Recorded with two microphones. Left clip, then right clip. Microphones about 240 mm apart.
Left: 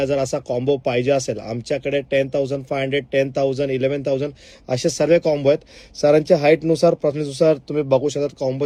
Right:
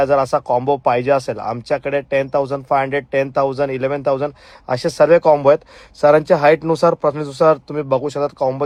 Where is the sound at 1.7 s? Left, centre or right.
Right.